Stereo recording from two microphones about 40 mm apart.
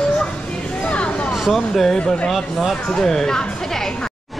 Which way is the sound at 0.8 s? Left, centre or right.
Left.